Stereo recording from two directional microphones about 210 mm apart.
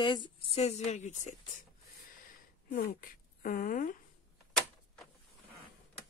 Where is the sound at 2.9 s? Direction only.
40° left (ahead or behind).